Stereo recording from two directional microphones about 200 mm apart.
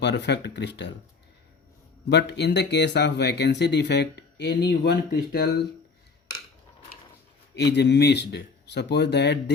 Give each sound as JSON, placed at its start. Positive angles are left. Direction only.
{"t": 0.0, "sound": "speech", "side_deg": 60}
{"t": 2.0, "sound": "speech", "side_deg": 60}
{"t": 7.5, "sound": "speech", "side_deg": 55}